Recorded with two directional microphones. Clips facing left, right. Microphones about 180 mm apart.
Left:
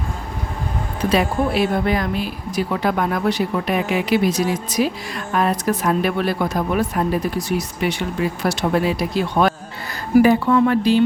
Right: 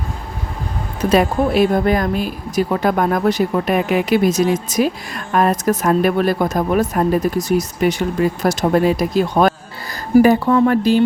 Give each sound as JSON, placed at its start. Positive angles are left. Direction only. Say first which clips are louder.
{"t": 1.1, "sound": "speech", "louder": "right 4 dB", "side_deg": -45}